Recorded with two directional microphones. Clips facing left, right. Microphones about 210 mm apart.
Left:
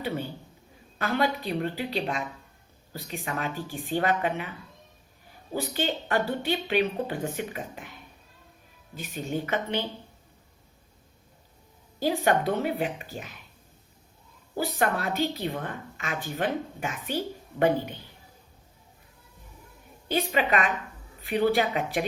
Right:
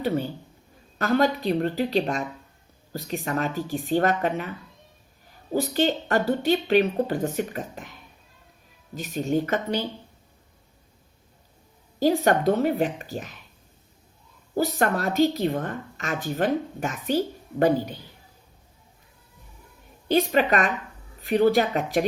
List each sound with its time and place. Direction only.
0.9 s a woman's voice: 45° right (ahead or behind)
5.5 s speech: 40° right (ahead or behind)
9.0 s a woman's voice: 40° right (ahead or behind)
11.9 s speech: 45° right (ahead or behind)
14.5 s a woman's voice: 45° right (ahead or behind)
20.1 s speech: 40° right (ahead or behind)